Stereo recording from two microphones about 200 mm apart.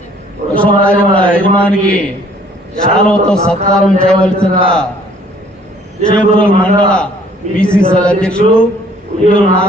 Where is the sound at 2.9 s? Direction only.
5° left (ahead or behind).